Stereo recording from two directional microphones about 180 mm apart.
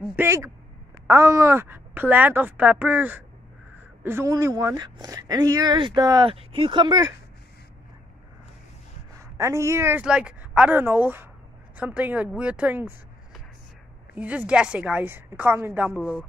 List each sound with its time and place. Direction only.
0.1 s speech: 15° right (ahead or behind)
9.4 s a woman's voice: 15° right (ahead or behind)